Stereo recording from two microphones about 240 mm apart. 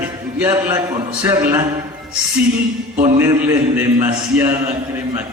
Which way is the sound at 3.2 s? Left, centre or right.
Centre.